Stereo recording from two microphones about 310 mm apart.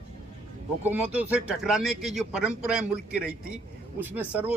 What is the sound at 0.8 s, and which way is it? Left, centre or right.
A man's voice, centre.